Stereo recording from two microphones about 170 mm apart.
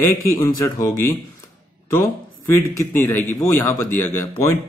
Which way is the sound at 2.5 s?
15° left (ahead or behind).